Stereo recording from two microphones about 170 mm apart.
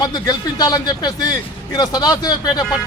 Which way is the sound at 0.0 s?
25° left (ahead or behind).